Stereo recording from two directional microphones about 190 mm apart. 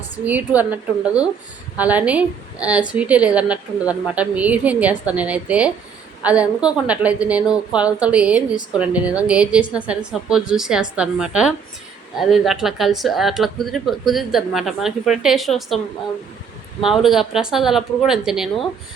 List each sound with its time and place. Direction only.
0.3 s a woman's voice: 10° right (ahead or behind)
16.8 s a woman's voice: centre (ahead or behind)